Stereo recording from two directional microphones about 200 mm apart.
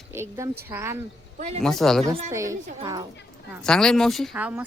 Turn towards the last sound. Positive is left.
turn(degrees=-10)  # may be behind; listen again after turning